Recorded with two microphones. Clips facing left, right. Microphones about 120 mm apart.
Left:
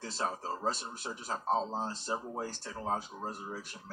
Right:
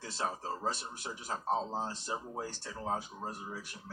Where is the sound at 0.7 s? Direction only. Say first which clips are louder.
Left 2 dB; 30° left (ahead or behind).